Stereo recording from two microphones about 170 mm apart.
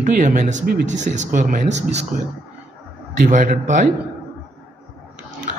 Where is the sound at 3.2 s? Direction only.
50° right (ahead or behind).